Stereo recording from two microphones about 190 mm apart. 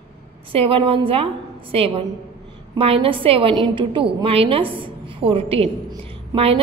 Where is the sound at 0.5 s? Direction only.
30° right (ahead or behind).